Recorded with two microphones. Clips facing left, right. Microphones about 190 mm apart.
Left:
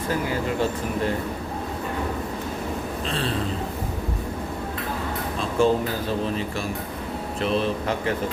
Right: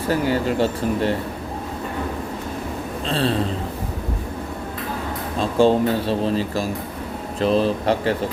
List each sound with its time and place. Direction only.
0.1 s speech: 30° right (ahead or behind)
3.1 s speech: 35° right (ahead or behind)
5.4 s speech: 30° right (ahead or behind)